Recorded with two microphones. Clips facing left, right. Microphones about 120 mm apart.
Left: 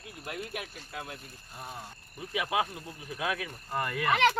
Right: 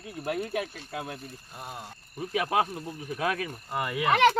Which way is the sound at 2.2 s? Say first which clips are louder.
Right 4 dB; 40° right (ahead or behind).